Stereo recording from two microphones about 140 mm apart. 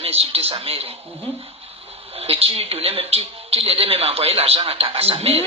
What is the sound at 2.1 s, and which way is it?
A woman's voice, 45° right (ahead or behind).